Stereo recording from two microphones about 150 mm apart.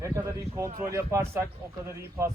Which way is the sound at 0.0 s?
20° right (ahead or behind).